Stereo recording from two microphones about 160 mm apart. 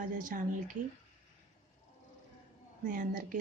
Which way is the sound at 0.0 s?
55° right (ahead or behind).